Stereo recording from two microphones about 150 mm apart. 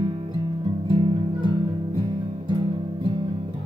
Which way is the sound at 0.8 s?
35° right (ahead or behind).